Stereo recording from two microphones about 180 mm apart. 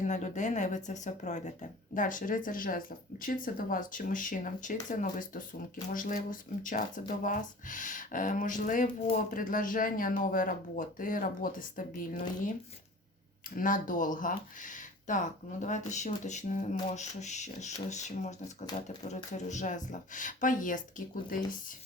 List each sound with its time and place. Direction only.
0.0 s speech: 40° left (ahead or behind)
13.6 s speech: 50° left (ahead or behind)